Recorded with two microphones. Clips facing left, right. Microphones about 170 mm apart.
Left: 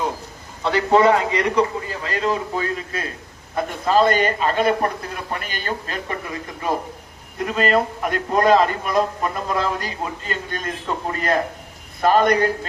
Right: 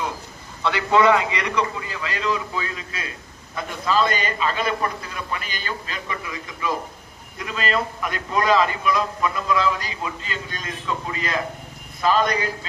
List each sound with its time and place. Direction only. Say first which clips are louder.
0.6 s a man's voice: left 2 dB; 40° left (ahead or behind); by 12.5 s 55° left (ahead or behind)